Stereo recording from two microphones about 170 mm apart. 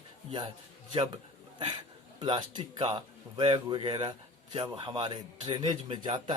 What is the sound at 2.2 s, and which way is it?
Speech, 25° right (ahead or behind).